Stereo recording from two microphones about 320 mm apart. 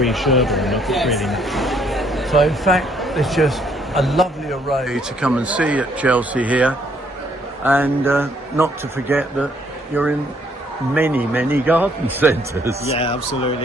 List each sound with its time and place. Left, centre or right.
0.0 s a man's voice: centre
12.9 s speech: centre